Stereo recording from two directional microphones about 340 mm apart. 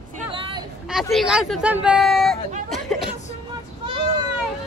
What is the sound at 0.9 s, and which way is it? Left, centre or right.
Speech, centre.